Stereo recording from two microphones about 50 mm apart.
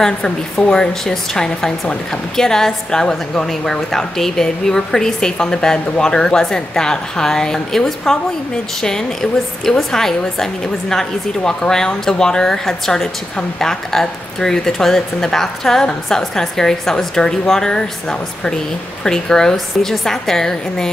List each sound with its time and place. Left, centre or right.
0.0 s a woman's voice: centre
9.7 s a woman's voice: centre
19.0 s a woman's voice: centre